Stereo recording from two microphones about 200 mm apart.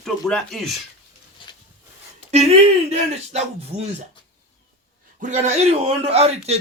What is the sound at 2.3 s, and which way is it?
Speech, 30° right (ahead or behind).